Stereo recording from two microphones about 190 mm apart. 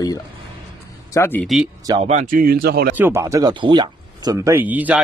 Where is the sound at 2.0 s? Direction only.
40° right (ahead or behind).